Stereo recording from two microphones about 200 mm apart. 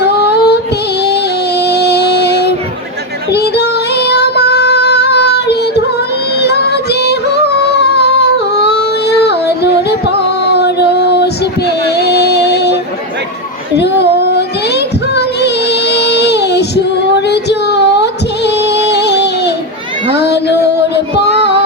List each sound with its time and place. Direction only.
0.0 s music: 55° left (ahead or behind)
3.3 s female singing: 55° left (ahead or behind)
6.4 s music: 55° left (ahead or behind)
13.7 s child singing: 55° left (ahead or behind)
17.2 s music: 60° left (ahead or behind)
20.9 s child singing: 60° left (ahead or behind)